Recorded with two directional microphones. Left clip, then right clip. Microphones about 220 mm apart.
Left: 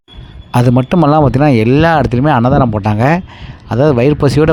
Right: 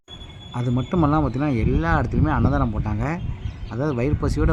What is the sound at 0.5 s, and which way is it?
Speech, 40° left (ahead or behind).